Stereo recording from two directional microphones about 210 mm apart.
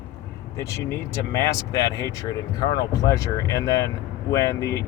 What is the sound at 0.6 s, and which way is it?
Speech, 15° left (ahead or behind).